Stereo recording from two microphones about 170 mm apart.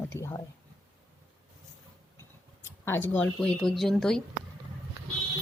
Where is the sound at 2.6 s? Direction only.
15° left (ahead or behind).